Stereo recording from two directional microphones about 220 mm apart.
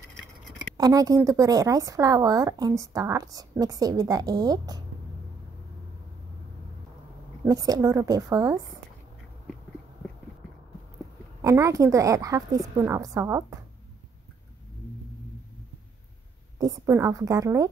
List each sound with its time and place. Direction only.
0.7 s speech: 15° right (ahead or behind)
7.4 s speech: 15° right (ahead or behind)
11.4 s speech: 15° right (ahead or behind)
16.5 s speech: 15° right (ahead or behind)